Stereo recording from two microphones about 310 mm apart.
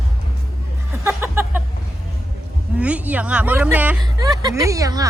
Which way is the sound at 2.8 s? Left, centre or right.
Centre.